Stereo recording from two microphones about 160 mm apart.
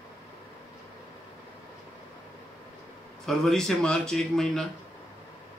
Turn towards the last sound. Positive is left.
turn(degrees=5)  # may be behind; listen again after turning